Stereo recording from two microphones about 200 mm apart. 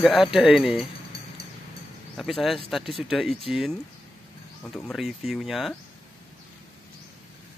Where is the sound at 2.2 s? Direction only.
Centre (ahead or behind).